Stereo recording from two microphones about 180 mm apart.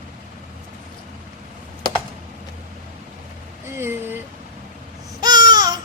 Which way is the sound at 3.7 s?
15° right (ahead or behind).